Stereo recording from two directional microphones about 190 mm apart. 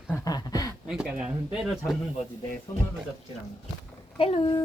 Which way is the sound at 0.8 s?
5° right (ahead or behind).